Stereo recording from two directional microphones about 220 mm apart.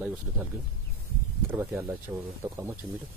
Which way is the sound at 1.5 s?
5° right (ahead or behind).